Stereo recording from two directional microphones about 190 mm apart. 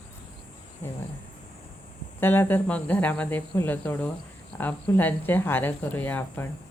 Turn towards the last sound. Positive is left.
turn(degrees=10)  # may be behind; listen again after turning